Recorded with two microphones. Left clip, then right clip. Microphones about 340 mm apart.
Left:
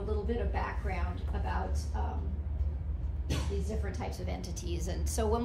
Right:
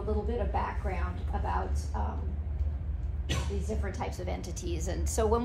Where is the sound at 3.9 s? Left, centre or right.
Centre.